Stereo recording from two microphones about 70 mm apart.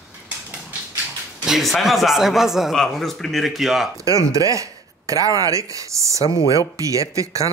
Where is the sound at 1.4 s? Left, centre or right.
Centre.